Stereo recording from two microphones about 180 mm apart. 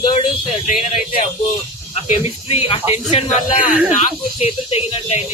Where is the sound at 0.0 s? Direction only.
35° left (ahead or behind).